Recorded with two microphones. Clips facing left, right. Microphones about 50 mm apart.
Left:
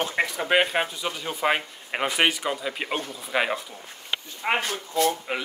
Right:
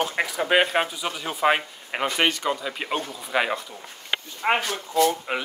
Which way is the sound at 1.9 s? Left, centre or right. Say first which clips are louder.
Even; centre.